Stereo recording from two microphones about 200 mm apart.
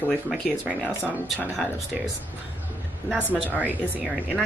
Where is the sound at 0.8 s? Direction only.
10° left (ahead or behind).